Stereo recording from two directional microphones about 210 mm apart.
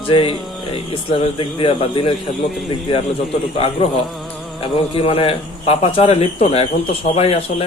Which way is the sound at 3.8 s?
25° left (ahead or behind).